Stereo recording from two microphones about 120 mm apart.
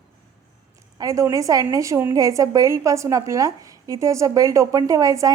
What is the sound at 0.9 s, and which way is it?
A woman's voice, 30° right (ahead or behind).